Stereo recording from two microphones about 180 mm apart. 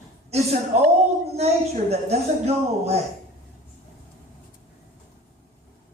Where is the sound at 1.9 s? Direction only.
35° right (ahead or behind).